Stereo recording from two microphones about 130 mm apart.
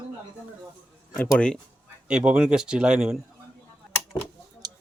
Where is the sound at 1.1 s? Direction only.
10° left (ahead or behind).